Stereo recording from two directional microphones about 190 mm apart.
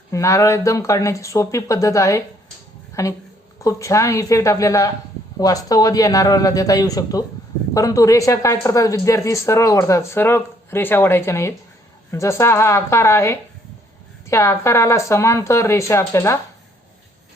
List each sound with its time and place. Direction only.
0.1 s speech: 15° left (ahead or behind)